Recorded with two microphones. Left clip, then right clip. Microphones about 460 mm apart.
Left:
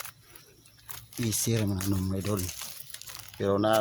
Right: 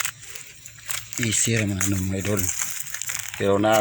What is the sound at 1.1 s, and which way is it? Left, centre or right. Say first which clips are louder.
Speech: right 7 dB; left.